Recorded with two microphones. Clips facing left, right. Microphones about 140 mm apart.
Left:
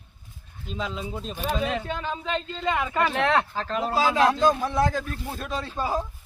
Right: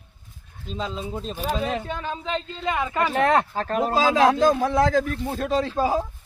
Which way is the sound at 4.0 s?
90° right.